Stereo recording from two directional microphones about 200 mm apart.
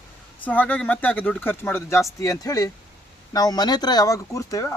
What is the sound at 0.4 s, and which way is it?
Speech, 10° left (ahead or behind).